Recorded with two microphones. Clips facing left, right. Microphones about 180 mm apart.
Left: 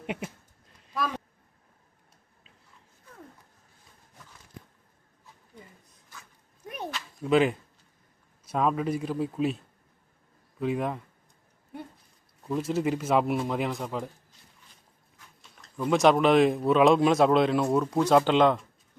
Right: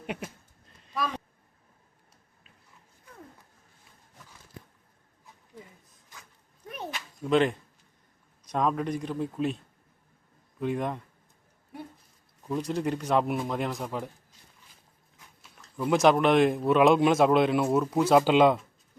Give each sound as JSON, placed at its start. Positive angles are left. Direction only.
{"t": 0.0, "sound": "speech", "side_deg": 20}
{"t": 0.9, "sound": "speech", "side_deg": 0}
{"t": 6.6, "sound": "a sound", "side_deg": 10}
{"t": 7.2, "sound": "speech", "side_deg": 5}
{"t": 10.6, "sound": "speech", "side_deg": 0}
{"t": 12.4, "sound": "speech", "side_deg": 0}
{"t": 15.4, "sound": "speech", "side_deg": -5}